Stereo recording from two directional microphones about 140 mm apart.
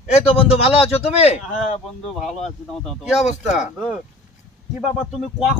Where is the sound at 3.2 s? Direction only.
55° left (ahead or behind).